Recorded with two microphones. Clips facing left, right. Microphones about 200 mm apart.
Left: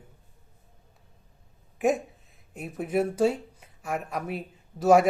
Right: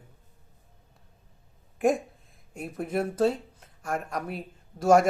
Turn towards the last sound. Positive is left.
turn(degrees=5)  # may be behind; listen again after turning